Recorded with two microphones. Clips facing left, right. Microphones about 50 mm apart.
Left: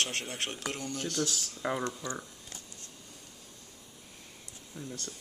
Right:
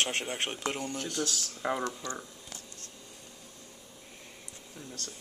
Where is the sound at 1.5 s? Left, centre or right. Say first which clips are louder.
Right 1 dB; centre.